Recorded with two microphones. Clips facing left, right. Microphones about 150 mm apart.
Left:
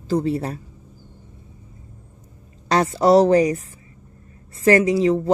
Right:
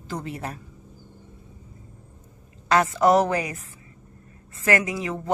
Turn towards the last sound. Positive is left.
turn(degrees=35)  # may be behind; listen again after turning